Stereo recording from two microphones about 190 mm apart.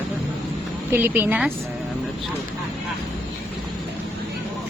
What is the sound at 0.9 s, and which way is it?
Speech, 10° right (ahead or behind).